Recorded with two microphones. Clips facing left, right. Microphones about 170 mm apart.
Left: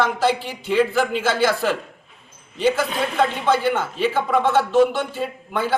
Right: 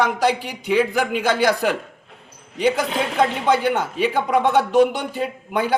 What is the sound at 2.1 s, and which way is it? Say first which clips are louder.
Dog: right 5 dB; 75° right (ahead or behind).